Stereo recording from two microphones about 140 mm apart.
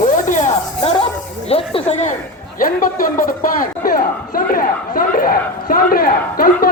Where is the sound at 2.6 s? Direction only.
80° left.